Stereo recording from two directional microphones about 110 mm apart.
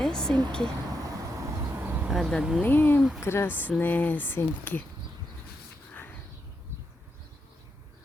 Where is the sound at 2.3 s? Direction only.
5° right (ahead or behind).